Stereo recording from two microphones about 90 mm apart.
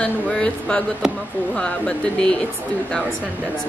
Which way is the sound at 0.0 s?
10° left (ahead or behind).